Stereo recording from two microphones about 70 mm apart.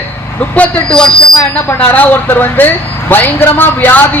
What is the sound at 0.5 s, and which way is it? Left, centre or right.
A man's voice, centre.